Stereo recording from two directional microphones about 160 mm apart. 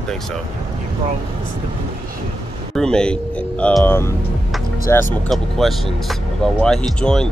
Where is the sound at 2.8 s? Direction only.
5° left (ahead or behind).